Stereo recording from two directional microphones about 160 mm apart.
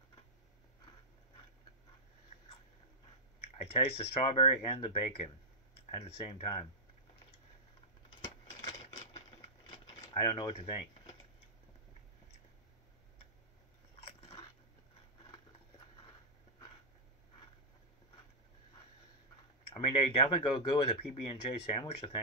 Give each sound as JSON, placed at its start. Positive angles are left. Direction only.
{"t": 3.7, "sound": "speech", "side_deg": 35}
{"t": 9.7, "sound": "a sound", "side_deg": 35}
{"t": 19.7, "sound": "speech", "side_deg": 35}